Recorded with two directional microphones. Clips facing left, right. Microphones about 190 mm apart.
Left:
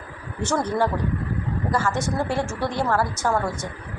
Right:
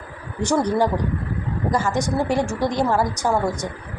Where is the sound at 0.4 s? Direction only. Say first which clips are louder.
Right 3 dB; 15° right (ahead or behind).